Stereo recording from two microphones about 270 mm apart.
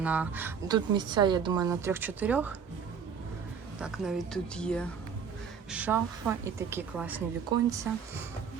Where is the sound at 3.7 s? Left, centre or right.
Centre.